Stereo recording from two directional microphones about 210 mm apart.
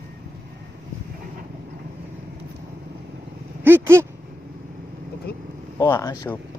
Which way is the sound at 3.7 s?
10° right (ahead or behind).